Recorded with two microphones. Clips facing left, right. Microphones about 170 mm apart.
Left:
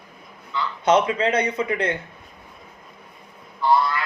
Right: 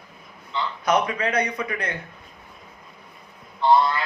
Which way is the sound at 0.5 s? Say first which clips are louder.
Even; 25° right (ahead or behind).